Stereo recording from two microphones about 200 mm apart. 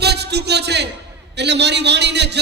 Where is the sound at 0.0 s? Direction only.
55° right (ahead or behind).